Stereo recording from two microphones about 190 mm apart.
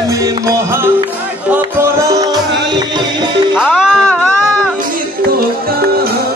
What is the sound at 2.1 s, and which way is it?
Music, 20° right (ahead or behind).